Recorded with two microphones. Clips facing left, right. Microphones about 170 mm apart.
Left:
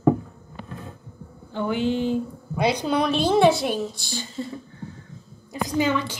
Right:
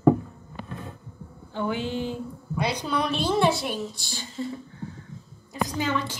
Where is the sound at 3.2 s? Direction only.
20° left (ahead or behind).